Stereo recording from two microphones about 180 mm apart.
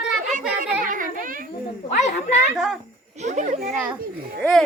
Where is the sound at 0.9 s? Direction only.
50° right (ahead or behind).